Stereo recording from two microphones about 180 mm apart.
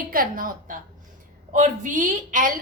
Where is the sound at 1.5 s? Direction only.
45° right (ahead or behind).